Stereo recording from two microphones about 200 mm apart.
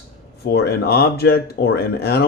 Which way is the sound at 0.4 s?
55° left (ahead or behind).